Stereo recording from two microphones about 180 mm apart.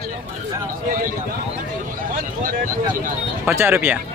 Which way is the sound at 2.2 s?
50° right (ahead or behind).